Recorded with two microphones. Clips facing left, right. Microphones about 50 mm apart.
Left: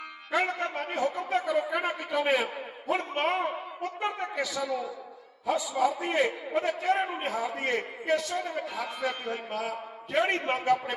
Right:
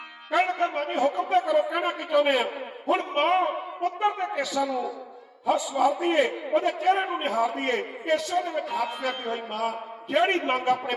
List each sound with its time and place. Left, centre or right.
0.3 s a man's voice: right